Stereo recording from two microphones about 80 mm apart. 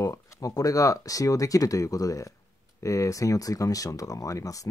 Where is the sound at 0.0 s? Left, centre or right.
Left.